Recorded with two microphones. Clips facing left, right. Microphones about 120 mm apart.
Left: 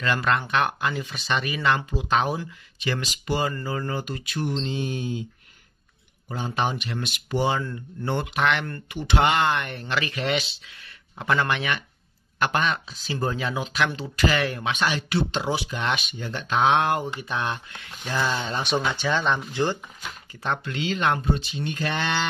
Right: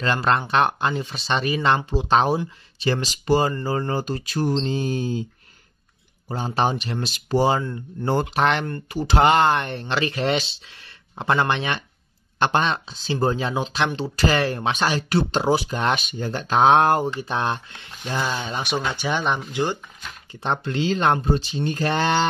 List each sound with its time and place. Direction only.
0.0 s speech: 30° right (ahead or behind)
6.2 s speech: 35° right (ahead or behind)
18.0 s speech: 15° right (ahead or behind)
20.4 s speech: 30° right (ahead or behind)